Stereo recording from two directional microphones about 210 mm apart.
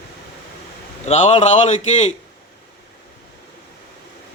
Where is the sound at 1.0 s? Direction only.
30° left (ahead or behind).